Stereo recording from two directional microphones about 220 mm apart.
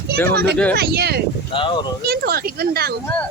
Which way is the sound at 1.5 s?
25° left (ahead or behind).